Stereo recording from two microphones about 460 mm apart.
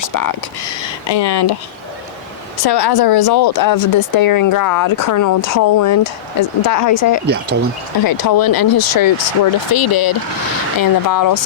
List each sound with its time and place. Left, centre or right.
0.0 s a sound: left
0.8 s speech: left
2.6 s speech: left
7.3 s speech: right
8.0 s speech: left